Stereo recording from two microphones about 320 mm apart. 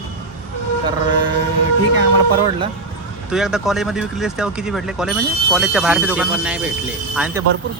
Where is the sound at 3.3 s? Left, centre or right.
Centre.